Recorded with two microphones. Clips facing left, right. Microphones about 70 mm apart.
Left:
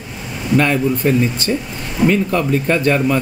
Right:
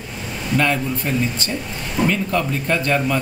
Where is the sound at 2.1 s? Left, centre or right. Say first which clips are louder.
Left 5 dB; left.